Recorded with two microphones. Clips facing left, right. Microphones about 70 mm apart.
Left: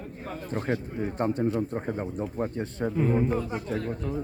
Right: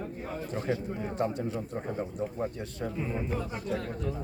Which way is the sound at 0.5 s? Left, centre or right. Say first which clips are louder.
Left 3 dB; left.